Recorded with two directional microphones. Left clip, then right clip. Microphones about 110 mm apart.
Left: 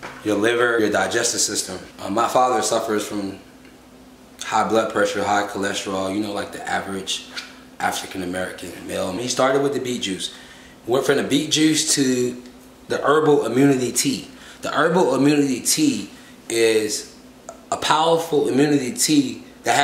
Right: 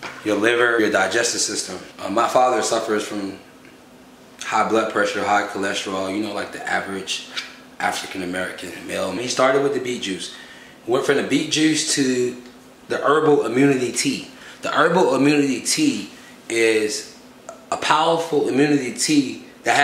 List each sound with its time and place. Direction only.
0.2 s speech: 5° left (ahead or behind)
4.4 s a man's voice: 10° left (ahead or behind)